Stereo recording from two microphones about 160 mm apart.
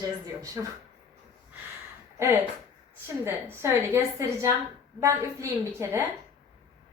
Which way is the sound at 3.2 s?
15° right (ahead or behind).